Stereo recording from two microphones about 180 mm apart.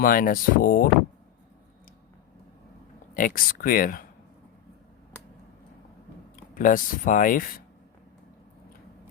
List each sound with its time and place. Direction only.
0.0 s speech: 50° left (ahead or behind)
3.2 s speech: 50° left (ahead or behind)
6.3 s speech: 50° left (ahead or behind)